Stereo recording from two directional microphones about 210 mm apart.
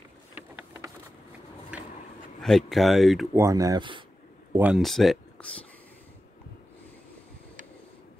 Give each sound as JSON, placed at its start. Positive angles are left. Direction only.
{"t": 0.3, "sound": "vehicle", "side_deg": -10}
{"t": 1.7, "sound": "a sound", "side_deg": -5}
{"t": 2.4, "sound": "speech", "side_deg": 0}
{"t": 3.3, "sound": "speech", "side_deg": -15}
{"t": 4.6, "sound": "speech", "side_deg": -5}